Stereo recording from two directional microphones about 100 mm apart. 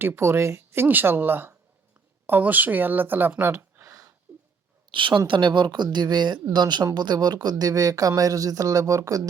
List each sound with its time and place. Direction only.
0.0 s speech: 25° right (ahead or behind)
4.9 s a woman's voice: 55° right (ahead or behind); by 9.2 s 35° right (ahead or behind)